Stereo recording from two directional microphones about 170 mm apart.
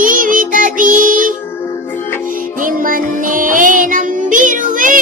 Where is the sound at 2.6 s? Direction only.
55° right (ahead or behind).